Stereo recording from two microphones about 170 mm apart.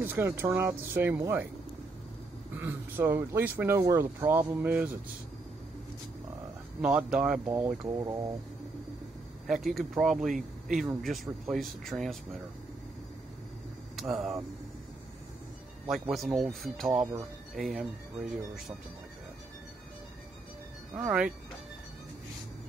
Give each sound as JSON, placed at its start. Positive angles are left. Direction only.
{"t": 0.0, "sound": "speech", "side_deg": -10}
{"t": 2.5, "sound": "speech", "side_deg": -10}
{"t": 6.8, "sound": "speech", "side_deg": -5}
{"t": 8.0, "sound": "speech", "side_deg": -20}
{"t": 9.5, "sound": "speech", "side_deg": 0}
{"t": 13.9, "sound": "speech", "side_deg": 0}
{"t": 15.9, "sound": "speech", "side_deg": 0}
{"t": 20.9, "sound": "speech", "side_deg": -5}